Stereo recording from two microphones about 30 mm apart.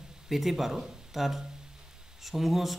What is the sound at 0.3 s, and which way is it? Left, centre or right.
Speech, centre.